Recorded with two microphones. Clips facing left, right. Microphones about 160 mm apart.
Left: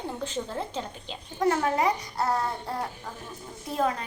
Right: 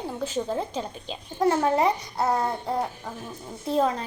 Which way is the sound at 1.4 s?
35° right (ahead or behind).